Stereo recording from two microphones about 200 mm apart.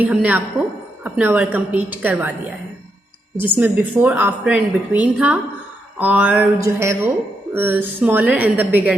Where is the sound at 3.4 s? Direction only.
10° right (ahead or behind).